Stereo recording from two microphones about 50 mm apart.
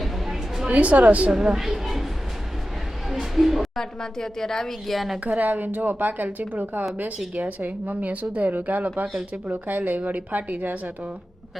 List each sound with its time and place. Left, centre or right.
0.0 s a sound: centre
0.7 s a woman's voice: right
1.5 s speech: centre
3.1 s a sound: centre
3.8 s a woman's voice: centre
5.2 s speech: right